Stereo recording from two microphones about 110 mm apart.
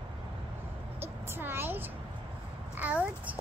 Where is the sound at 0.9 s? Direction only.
20° right (ahead or behind).